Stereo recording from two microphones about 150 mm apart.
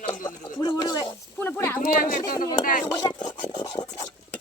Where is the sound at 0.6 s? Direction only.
30° left (ahead or behind).